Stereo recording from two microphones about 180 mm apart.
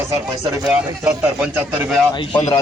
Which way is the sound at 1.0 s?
10° right (ahead or behind).